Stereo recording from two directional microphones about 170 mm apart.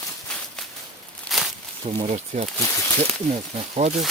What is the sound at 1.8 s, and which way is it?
Speech, 35° right (ahead or behind).